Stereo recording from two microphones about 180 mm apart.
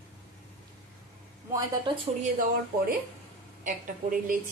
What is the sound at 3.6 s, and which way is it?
Speech, 50° right (ahead or behind).